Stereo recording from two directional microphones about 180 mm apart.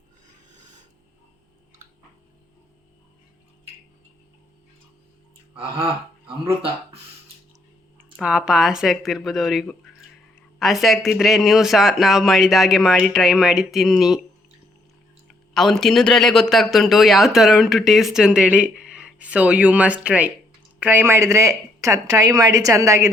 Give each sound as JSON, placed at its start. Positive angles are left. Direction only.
{"t": 5.5, "sound": "speech", "side_deg": -30}
{"t": 8.1, "sound": "a man's voice", "side_deg": -5}
{"t": 15.5, "sound": "a man's voice", "side_deg": 0}